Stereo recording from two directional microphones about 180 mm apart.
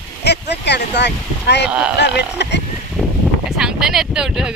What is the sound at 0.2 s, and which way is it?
Speech, 70° left (ahead or behind).